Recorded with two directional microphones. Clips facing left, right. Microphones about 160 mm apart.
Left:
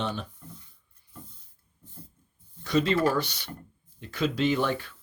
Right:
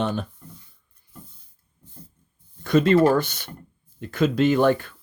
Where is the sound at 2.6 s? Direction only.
50° right (ahead or behind).